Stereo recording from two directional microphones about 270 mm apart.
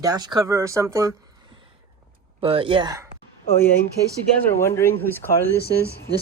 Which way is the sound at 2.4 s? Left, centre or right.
Centre.